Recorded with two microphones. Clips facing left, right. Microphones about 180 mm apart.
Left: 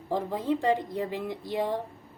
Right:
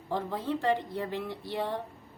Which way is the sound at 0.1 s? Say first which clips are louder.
Left 4 dB; 15° left (ahead or behind).